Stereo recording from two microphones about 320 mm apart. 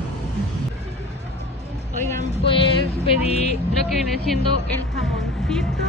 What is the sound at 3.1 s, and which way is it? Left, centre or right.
Speech, centre.